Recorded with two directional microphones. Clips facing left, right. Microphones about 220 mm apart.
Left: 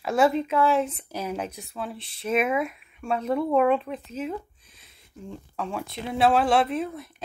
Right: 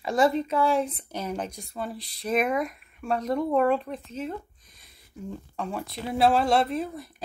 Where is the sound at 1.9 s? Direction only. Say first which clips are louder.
Right 1 dB; 35° right (ahead or behind).